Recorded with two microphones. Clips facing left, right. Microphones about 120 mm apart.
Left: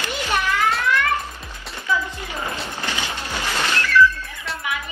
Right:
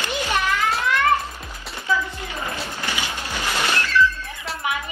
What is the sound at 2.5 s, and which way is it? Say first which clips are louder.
Music: even; 15° right (ahead or behind).